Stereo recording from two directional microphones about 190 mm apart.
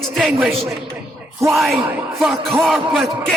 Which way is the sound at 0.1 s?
Centre (ahead or behind).